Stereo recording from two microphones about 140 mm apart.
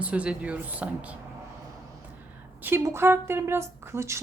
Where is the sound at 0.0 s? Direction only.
10° right (ahead or behind).